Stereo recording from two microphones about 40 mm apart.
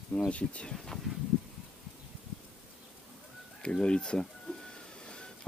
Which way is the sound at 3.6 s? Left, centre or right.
Left.